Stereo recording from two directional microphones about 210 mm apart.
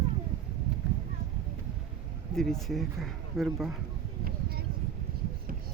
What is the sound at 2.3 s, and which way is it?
Speech, centre (ahead or behind).